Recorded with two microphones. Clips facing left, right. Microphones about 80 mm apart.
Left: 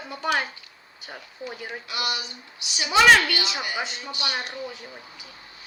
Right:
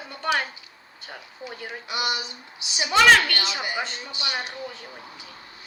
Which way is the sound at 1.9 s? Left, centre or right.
Right.